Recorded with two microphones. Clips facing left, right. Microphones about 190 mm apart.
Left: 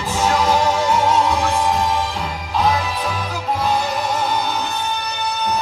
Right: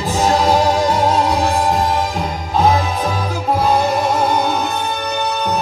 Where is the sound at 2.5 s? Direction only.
45° right (ahead or behind).